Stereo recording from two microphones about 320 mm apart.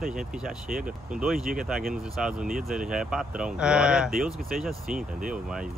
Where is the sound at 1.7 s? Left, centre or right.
Centre.